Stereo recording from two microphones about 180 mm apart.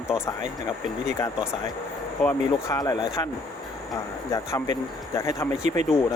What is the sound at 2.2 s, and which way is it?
Speech, 20° left (ahead or behind).